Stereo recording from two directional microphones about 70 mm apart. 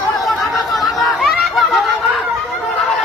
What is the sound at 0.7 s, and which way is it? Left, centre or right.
Chatter, centre.